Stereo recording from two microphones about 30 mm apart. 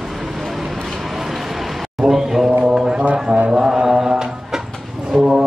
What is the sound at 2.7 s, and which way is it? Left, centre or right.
Music, right.